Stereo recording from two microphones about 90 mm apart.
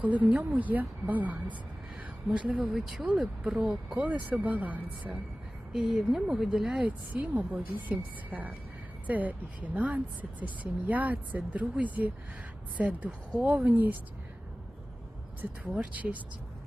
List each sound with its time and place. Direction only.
0.0 s speech: 15° right (ahead or behind)
5.7 s speech: 5° right (ahead or behind)
6.8 s speech: 15° right (ahead or behind)
15.4 s speech: 15° right (ahead or behind)